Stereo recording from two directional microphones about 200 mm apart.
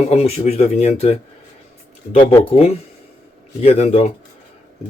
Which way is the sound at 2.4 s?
30° left (ahead or behind).